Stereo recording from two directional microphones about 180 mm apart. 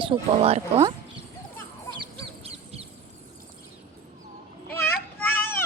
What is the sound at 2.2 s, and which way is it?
Fowl, 35° right (ahead or behind).